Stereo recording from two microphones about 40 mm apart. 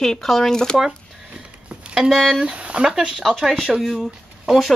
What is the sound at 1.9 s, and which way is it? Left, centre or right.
Speech, centre.